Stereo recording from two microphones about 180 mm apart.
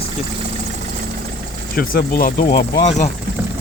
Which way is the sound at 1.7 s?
55° left (ahead or behind).